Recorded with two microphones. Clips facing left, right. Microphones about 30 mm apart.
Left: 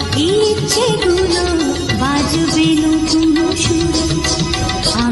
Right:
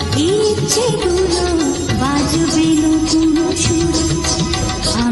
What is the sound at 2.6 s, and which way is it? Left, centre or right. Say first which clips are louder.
Music: even; left.